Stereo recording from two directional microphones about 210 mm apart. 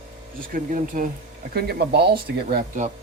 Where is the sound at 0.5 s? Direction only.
40° right (ahead or behind).